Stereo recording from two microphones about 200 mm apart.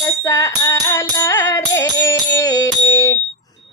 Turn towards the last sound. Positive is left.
turn(degrees=15)  # may be behind; listen again after turning